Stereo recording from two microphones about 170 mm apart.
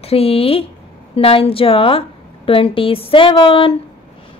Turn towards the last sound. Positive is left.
turn(degrees=30)  # may be behind; listen again after turning